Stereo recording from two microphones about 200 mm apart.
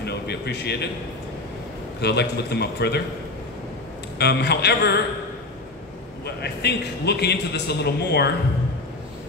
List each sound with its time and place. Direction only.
0.0 s a sound: 55° left (ahead or behind)
2.0 s a man's voice: 55° left (ahead or behind)
4.2 s a man's voice: 55° left (ahead or behind)
6.2 s a man's voice: 55° left (ahead or behind)